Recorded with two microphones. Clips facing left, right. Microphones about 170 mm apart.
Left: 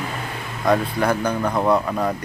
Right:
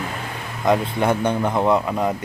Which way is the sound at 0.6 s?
20° right (ahead or behind).